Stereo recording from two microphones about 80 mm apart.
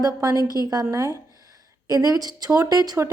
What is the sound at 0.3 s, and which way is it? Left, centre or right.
Speech, left.